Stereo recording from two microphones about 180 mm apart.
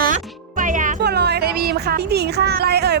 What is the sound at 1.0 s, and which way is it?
Speech, 65° right (ahead or behind).